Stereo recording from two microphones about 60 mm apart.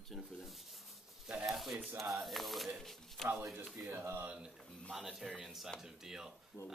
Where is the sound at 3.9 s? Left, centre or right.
Right.